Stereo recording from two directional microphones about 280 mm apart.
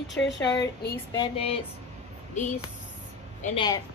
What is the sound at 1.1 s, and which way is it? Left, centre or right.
Speech, centre.